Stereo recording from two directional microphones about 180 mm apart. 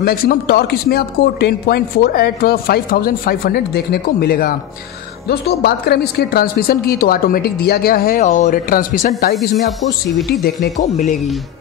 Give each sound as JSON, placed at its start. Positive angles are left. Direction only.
{"t": 0.0, "sound": "speech", "side_deg": 55}
{"t": 9.2, "sound": "speech", "side_deg": 60}
{"t": 10.1, "sound": "speech", "side_deg": 0}
{"t": 10.8, "sound": "speech", "side_deg": 40}